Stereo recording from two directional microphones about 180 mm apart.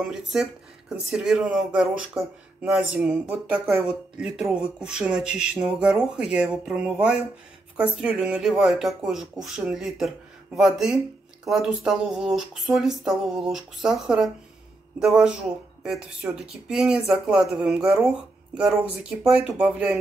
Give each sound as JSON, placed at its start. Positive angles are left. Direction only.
{"t": 0.1, "sound": "speech", "side_deg": 0}